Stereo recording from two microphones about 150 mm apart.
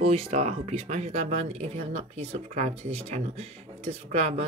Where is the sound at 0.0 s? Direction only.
40° right (ahead or behind).